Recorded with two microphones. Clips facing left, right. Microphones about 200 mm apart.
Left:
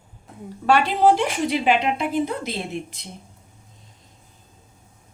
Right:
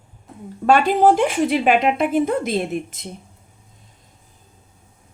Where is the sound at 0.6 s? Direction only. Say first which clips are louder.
Right 3 dB; 50° right (ahead or behind).